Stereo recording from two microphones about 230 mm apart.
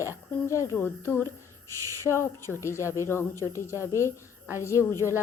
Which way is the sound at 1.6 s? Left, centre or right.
Left.